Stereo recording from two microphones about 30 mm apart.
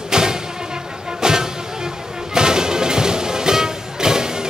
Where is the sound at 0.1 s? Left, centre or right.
Right.